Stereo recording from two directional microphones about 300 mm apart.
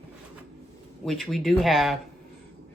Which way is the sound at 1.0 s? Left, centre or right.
Centre.